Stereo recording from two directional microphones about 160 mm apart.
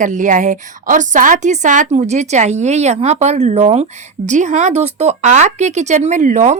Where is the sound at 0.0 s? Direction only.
55° right (ahead or behind).